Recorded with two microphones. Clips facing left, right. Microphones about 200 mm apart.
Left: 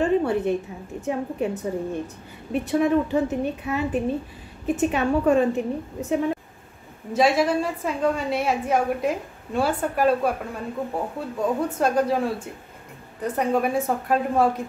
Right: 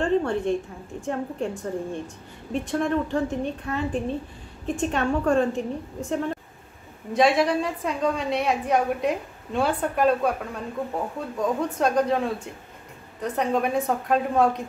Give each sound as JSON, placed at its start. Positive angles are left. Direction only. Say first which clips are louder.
{"t": 0.0, "sound": "a woman's voice", "louder": "left 2 dB", "side_deg": 5}
{"t": 13.2, "sound": "a woman's voice", "louder": "left 2 dB", "side_deg": 5}